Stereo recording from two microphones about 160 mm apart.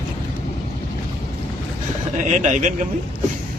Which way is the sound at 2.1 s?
50° right (ahead or behind).